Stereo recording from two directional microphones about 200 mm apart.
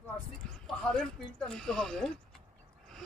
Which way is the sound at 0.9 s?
5° left (ahead or behind).